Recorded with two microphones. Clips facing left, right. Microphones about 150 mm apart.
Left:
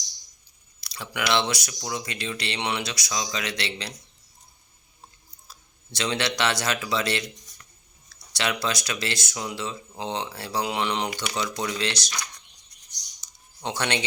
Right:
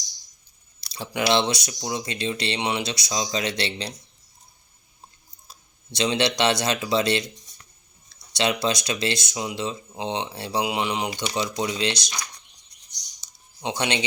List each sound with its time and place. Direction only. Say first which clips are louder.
0.8 s speech: right 4 dB; 30° right (ahead or behind)
5.5 s speech: right 3 dB; 20° right (ahead or behind)
10.7 s speech: right 1 dB; 10° right (ahead or behind)
11.1 s speech: right 2 dB; 25° right (ahead or behind)
13.6 s speech: right 2 dB; 15° right (ahead or behind)